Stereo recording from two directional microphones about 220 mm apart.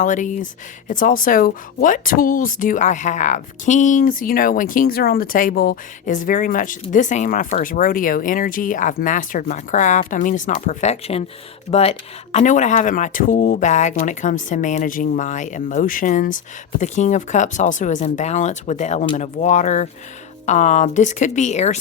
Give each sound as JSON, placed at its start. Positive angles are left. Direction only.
{"t": 0.0, "sound": "speech", "side_deg": 35}